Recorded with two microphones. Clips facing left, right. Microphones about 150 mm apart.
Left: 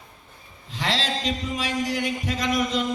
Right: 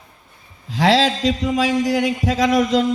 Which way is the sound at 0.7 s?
90° right.